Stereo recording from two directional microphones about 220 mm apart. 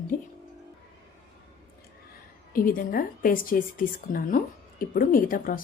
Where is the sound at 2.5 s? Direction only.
40° left (ahead or behind).